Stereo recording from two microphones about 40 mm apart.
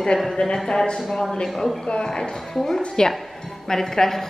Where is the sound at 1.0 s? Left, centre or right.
Centre.